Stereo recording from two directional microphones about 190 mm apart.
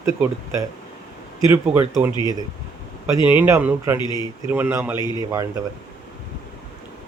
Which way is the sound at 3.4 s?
10° right (ahead or behind).